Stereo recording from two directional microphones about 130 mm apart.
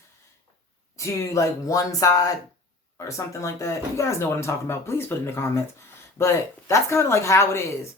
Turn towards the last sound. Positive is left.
turn(degrees=20)  # may be behind; listen again after turning